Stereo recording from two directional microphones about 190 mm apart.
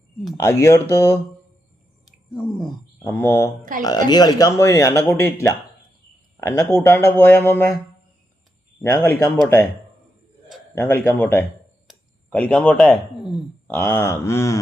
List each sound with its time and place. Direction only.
0.3 s speech: 15° left (ahead or behind)
2.0 s a sound: 5° right (ahead or behind)
3.0 s speech: 10° left (ahead or behind)
8.8 s speech: 15° left (ahead or behind)
10.8 s speech: 10° left (ahead or behind)